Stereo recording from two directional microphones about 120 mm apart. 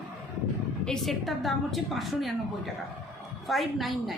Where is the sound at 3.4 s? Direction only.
Centre (ahead or behind).